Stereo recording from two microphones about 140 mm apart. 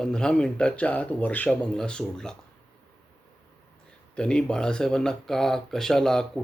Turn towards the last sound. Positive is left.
turn(degrees=5)  # may be behind; listen again after turning